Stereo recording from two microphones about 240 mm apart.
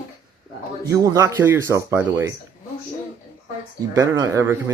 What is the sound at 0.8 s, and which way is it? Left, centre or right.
Speech, centre.